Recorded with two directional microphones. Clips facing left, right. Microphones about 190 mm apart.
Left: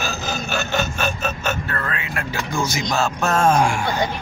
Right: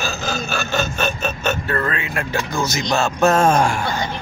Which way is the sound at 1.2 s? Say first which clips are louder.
Right 2 dB; 5° left (ahead or behind).